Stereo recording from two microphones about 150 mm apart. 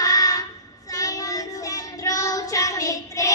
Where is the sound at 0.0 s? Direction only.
25° left (ahead or behind).